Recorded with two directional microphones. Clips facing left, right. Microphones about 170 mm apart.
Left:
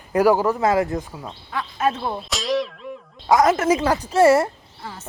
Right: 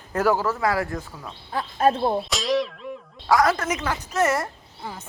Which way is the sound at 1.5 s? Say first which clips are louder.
Right 2 dB; 35° right (ahead or behind).